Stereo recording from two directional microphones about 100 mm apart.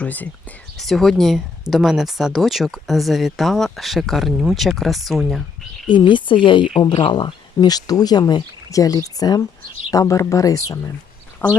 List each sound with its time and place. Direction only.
0.0 s speech: 15° left (ahead or behind)
0.8 s speech: centre (ahead or behind)
4.6 s speech: centre (ahead or behind)
5.9 s speech: 50° left (ahead or behind); by 10.8 s 35° left (ahead or behind)
11.4 s speech: 15° left (ahead or behind)